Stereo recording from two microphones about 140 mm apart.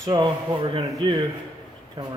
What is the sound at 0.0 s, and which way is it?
Speech, 30° right (ahead or behind).